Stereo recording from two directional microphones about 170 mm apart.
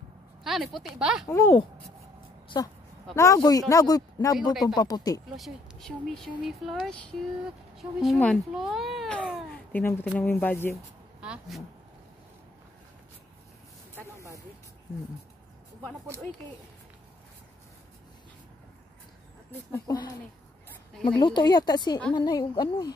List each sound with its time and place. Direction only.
0.4 s speech: centre (ahead or behind)
1.2 s speech: 15° left (ahead or behind)
2.4 s a sound: 25° left (ahead or behind)
3.2 s speech: 20° left (ahead or behind)
5.3 s speech: centre (ahead or behind)
9.7 s speech: 10° left (ahead or behind)
11.1 s vehicle: 5° right (ahead or behind)
13.9 s a sound: 20° right (ahead or behind)
19.7 s speech: 20° left (ahead or behind)
21.2 s speech: 25° left (ahead or behind)